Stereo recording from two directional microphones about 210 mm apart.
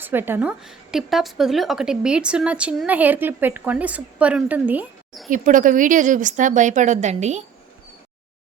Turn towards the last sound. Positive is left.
turn(degrees=-35)  # may be behind; listen again after turning